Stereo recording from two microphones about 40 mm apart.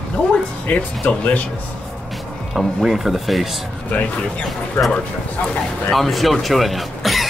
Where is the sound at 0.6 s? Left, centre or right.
Left.